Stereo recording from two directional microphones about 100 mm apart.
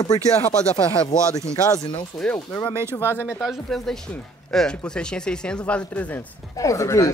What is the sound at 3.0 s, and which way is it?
Speech, 20° right (ahead or behind).